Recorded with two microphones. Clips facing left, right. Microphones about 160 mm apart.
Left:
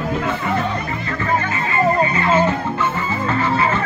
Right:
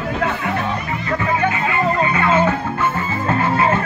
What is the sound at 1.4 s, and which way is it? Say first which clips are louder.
Music: right 1 dB; 60° right (ahead or behind).